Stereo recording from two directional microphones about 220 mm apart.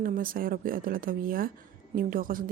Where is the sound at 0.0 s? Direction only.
40° right (ahead or behind).